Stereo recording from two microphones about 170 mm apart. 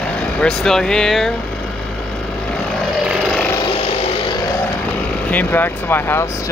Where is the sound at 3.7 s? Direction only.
35° left (ahead or behind).